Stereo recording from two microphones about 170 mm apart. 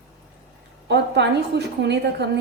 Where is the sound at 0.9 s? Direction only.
90° right.